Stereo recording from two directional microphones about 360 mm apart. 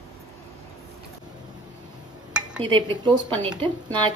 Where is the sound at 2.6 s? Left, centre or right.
Centre.